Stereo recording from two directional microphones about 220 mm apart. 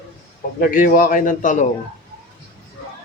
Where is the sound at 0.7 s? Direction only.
40° left (ahead or behind).